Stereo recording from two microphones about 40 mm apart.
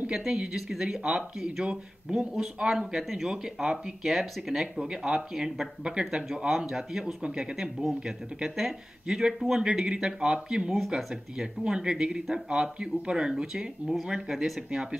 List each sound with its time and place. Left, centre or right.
0.1 s speech: centre
6.5 s speech: centre
7.8 s speech: centre
8.4 s speech: centre
9.0 s a man's voice: centre